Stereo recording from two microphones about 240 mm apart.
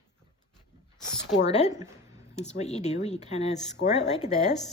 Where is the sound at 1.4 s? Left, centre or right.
Left.